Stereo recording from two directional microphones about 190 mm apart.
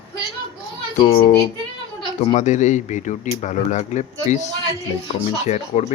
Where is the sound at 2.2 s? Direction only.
40° left (ahead or behind).